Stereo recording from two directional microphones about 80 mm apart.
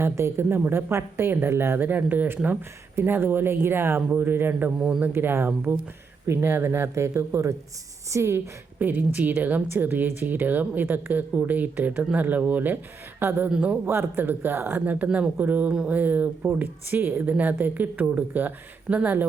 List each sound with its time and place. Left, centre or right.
0.0 s speech: right
8.8 s speech: right
13.8 s speech: right
15.7 s speech: centre
16.0 s speech: right